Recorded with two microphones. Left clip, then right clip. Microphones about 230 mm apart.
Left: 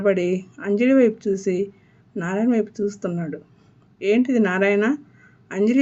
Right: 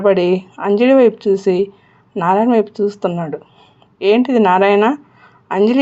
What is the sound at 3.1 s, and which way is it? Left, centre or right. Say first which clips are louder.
Speech: right 8 dB; right.